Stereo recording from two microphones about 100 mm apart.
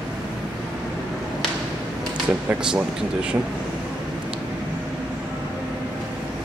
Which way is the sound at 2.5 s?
15° right (ahead or behind).